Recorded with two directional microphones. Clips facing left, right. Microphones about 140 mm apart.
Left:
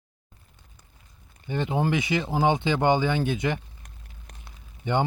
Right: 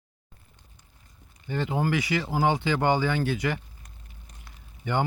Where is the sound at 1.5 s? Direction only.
20° left (ahead or behind).